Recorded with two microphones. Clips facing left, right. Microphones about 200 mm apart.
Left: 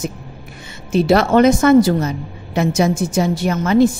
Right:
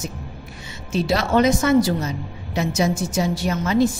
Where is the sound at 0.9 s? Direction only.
55° left (ahead or behind).